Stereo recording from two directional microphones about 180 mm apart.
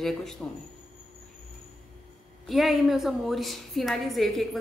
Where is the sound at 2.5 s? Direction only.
Centre (ahead or behind).